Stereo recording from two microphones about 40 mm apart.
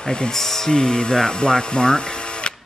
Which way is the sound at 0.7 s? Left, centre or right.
Centre.